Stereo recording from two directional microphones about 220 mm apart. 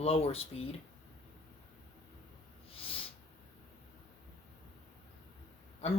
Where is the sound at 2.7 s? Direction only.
25° left (ahead or behind).